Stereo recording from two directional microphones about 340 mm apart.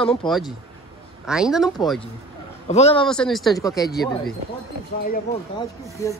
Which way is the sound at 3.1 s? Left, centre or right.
Centre.